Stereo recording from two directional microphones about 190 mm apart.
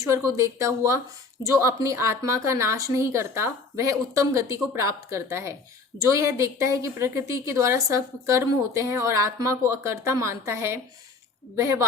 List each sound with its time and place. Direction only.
0.0 s a woman's voice: 15° right (ahead or behind)